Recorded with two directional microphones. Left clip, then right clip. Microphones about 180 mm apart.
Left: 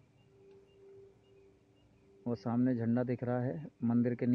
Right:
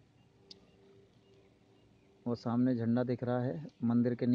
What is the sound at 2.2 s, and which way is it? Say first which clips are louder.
Speech: right 1 dB; centre (ahead or behind).